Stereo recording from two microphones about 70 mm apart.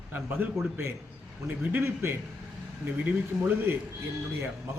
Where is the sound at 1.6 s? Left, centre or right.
Right.